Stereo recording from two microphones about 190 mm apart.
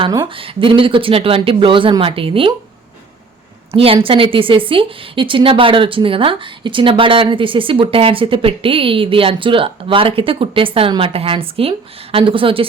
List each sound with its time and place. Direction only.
0.0 s a woman's voice: 25° right (ahead or behind)
3.7 s a woman's voice: 30° right (ahead or behind)